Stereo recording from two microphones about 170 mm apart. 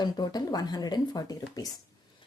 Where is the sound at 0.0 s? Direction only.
25° left (ahead or behind).